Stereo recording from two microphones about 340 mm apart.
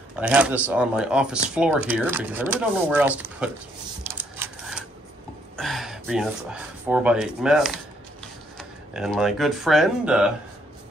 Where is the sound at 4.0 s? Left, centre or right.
Centre.